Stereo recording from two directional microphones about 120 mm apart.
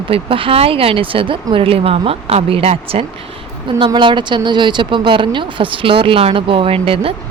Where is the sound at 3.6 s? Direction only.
45° right (ahead or behind).